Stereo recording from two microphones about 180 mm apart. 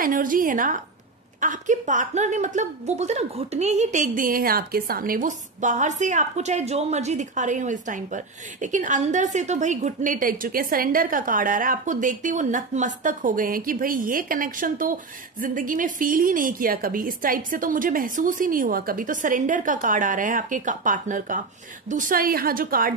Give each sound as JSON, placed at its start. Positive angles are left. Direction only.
{"t": 0.0, "sound": "a woman's voice", "side_deg": -50}